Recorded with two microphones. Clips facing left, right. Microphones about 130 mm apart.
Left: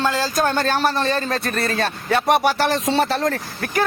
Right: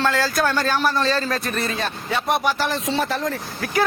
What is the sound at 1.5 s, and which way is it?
Music, 65° left (ahead or behind).